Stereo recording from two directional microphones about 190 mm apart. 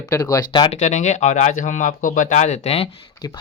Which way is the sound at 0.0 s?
20° left (ahead or behind).